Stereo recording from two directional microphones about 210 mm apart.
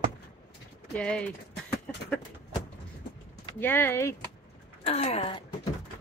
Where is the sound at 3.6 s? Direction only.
10° left (ahead or behind).